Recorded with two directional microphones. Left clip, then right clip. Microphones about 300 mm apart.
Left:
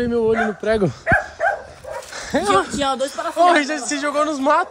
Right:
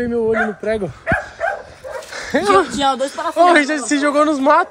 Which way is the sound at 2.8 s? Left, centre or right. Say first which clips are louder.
Right 3 dB; centre.